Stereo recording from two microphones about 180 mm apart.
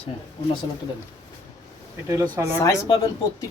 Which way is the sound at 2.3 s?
15° right (ahead or behind).